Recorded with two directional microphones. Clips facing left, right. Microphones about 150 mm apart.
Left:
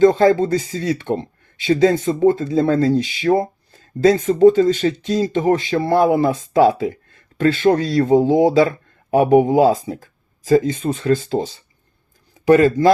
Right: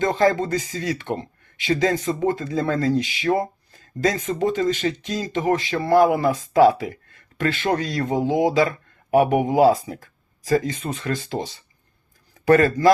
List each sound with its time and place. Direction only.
0.0 s speech: 30° left (ahead or behind)